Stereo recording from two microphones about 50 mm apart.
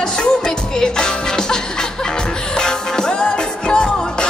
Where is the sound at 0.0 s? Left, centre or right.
Centre.